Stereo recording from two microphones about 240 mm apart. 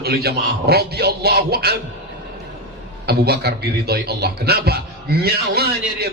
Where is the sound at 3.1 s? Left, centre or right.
Right.